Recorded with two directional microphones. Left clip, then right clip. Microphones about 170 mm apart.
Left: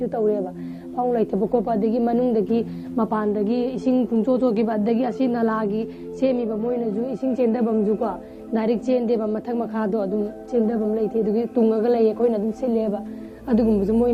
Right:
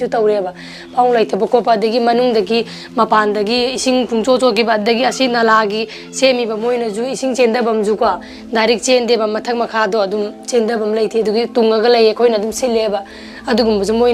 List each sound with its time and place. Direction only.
0.0 s a woman's voice: 20° right (ahead or behind)